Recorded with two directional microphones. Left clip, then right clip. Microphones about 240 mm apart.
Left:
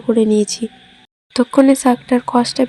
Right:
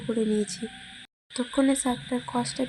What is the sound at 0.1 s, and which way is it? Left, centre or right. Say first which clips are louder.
Speech: left 13 dB; left.